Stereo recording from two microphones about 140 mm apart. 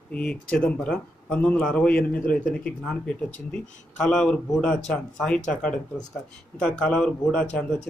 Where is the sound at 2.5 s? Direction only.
5° left (ahead or behind).